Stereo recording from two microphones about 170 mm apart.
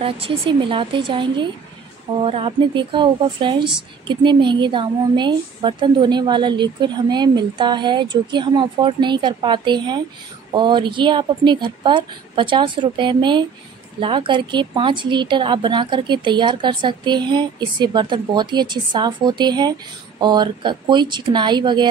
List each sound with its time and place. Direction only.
0.0 s a woman's voice: 30° right (ahead or behind)